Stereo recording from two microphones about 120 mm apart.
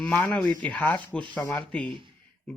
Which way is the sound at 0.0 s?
10° left (ahead or behind).